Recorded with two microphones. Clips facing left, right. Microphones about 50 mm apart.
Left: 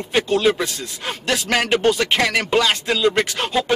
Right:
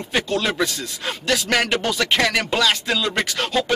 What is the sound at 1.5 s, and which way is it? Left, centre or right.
Speech, centre.